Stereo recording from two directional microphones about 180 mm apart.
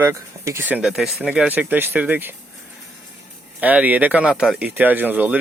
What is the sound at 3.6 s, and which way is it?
Speech, 10° right (ahead or behind).